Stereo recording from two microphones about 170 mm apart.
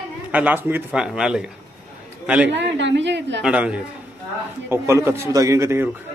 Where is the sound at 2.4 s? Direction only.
90° right.